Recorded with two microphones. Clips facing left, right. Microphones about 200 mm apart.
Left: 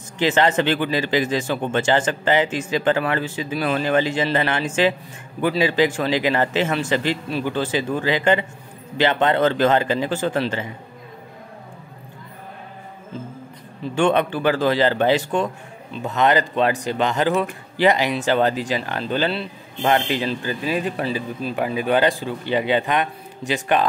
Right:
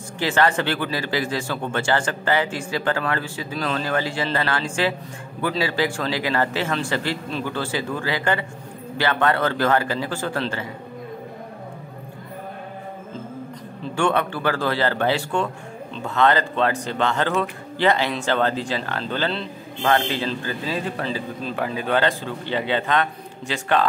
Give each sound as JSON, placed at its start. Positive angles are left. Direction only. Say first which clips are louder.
{"t": 0.2, "sound": "a man's voice", "louder": "left 3 dB", "side_deg": 20}
{"t": 13.9, "sound": "speech", "louder": "left 3 dB", "side_deg": 20}